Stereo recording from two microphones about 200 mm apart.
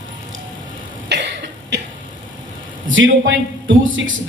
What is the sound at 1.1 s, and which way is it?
Cough, 60° right (ahead or behind).